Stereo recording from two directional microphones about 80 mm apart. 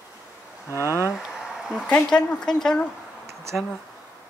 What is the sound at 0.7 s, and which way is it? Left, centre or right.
Speech, left.